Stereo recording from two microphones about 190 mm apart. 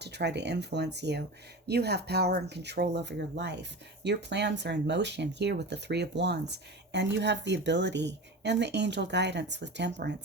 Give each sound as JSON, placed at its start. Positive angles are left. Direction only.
{"t": 0.0, "sound": "speech", "side_deg": -65}